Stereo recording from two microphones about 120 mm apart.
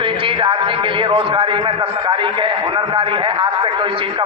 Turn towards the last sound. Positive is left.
turn(degrees=-45)  # may be behind; listen again after turning